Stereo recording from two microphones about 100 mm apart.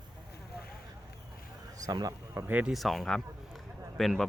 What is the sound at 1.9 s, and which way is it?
Speech, 40° right (ahead or behind).